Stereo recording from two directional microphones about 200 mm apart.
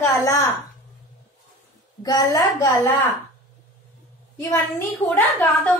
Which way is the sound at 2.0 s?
20° left (ahead or behind).